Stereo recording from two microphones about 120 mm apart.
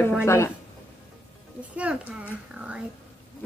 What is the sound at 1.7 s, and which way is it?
A child's voice, 10° right (ahead or behind).